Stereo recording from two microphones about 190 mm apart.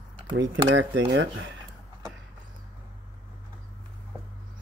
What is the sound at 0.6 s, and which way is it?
Speech, 80° right.